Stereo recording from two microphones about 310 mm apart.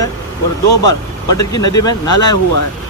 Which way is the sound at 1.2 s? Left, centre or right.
Centre.